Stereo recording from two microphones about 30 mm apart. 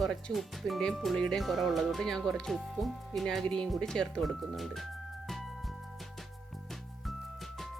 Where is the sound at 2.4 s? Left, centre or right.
Centre.